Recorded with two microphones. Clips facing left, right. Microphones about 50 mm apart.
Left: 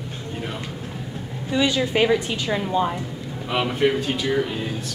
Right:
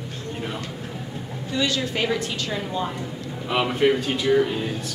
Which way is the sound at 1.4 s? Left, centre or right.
Centre.